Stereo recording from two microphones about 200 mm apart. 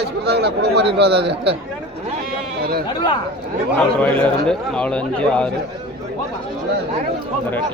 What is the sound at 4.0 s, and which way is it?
A man's voice, 5° left (ahead or behind).